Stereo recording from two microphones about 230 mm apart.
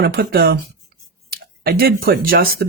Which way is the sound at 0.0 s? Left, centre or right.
Right.